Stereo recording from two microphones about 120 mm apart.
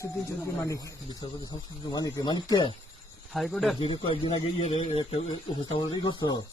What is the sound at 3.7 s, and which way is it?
Speech, 45° left (ahead or behind).